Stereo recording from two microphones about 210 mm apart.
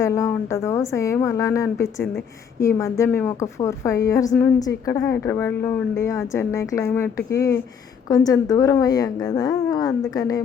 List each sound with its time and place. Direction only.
0.0 s a woman's voice: 15° left (ahead or behind)